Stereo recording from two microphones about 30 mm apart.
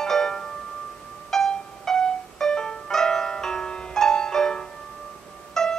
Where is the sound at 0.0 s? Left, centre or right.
Centre.